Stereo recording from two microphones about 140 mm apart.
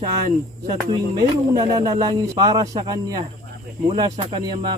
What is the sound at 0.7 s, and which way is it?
Speech, 30° right (ahead or behind).